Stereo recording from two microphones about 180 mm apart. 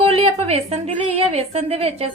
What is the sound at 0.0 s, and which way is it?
A woman's voice, 35° right (ahead or behind).